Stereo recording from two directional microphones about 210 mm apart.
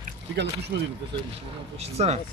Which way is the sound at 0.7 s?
50° right (ahead or behind).